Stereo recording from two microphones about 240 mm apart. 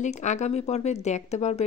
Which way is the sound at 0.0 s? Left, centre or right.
Left.